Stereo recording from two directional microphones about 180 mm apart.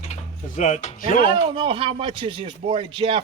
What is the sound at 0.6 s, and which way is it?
Speech, 40° left (ahead or behind).